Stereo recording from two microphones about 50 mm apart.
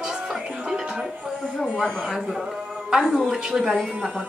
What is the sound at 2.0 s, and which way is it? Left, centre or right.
A woman's voice, centre.